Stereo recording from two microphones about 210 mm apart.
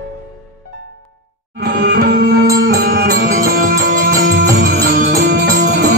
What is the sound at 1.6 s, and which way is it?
Music, 50° right (ahead or behind).